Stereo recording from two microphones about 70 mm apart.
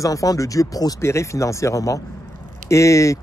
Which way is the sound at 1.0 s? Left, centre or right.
Left.